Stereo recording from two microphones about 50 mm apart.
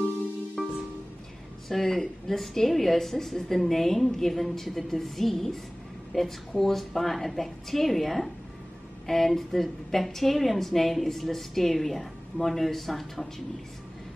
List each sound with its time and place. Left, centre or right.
0.6 s music: centre
1.7 s a woman's voice: centre